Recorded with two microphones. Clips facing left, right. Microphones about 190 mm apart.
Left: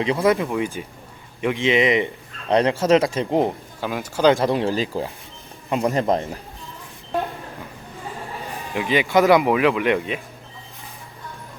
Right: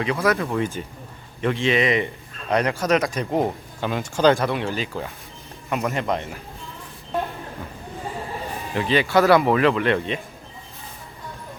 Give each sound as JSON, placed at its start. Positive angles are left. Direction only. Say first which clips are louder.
{"t": 0.0, "sound": "speech", "louder": "left 3 dB", "side_deg": 25}
{"t": 0.3, "sound": "speech", "louder": "left 1 dB", "side_deg": 10}
{"t": 3.8, "sound": "speech", "louder": "right 1 dB", "side_deg": 10}
{"t": 4.4, "sound": "speech", "louder": "left 4 dB", "side_deg": 35}
{"t": 8.7, "sound": "speech", "louder": "left 1 dB", "side_deg": 10}